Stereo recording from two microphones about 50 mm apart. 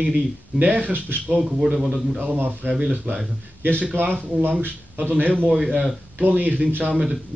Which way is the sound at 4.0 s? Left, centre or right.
Right.